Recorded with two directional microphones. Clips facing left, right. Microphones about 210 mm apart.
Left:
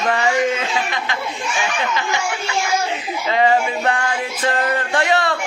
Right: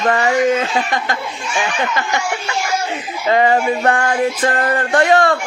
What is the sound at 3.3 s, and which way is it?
Music, 50° right (ahead or behind).